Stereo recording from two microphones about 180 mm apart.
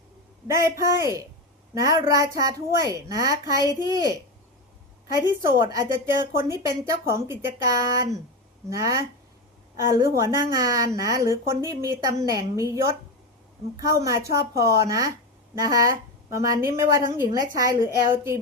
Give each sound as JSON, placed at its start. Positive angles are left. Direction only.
{"t": 0.4, "sound": "a woman's voice", "side_deg": -15}